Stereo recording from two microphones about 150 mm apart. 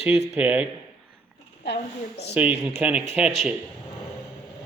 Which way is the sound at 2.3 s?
10° right (ahead or behind).